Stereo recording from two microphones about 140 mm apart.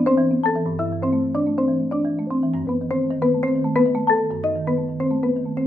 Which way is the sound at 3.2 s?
Centre (ahead or behind).